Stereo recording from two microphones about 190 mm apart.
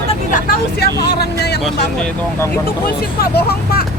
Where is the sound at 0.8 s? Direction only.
60° left (ahead or behind).